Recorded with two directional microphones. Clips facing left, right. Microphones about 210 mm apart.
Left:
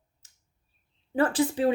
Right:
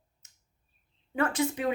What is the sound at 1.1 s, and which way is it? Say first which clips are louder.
Speech: left 4 dB; 30° left (ahead or behind).